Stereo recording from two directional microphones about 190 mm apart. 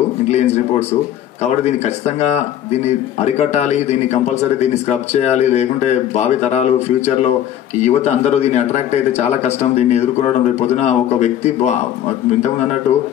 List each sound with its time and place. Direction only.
0.3 s a man's voice: 35° left (ahead or behind)